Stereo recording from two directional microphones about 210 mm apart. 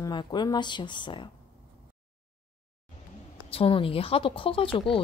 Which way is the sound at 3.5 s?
25° left (ahead or behind).